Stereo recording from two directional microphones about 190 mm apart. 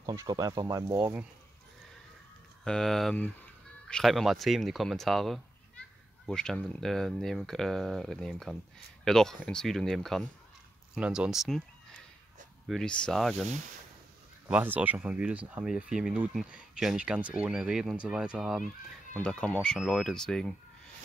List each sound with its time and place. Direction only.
0.0 s speech: 15° right (ahead or behind)
2.6 s speech: 5° left (ahead or behind)
14.5 s speech: 10° right (ahead or behind)